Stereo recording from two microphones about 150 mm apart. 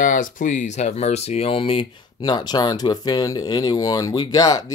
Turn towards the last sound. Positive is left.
turn(degrees=25)  # may be behind; listen again after turning